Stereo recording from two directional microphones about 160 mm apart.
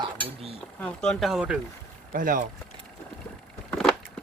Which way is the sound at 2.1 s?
60° right (ahead or behind).